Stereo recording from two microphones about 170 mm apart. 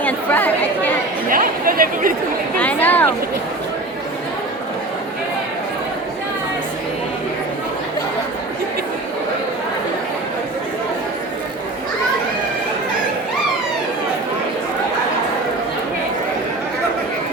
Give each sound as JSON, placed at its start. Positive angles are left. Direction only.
{"t": 0.0, "sound": "chatter", "side_deg": 10}
{"t": 1.3, "sound": "speech", "side_deg": -55}
{"t": 2.6, "sound": "speech", "side_deg": 10}